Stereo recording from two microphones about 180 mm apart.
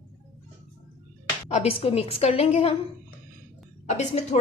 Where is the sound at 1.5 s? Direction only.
35° left (ahead or behind).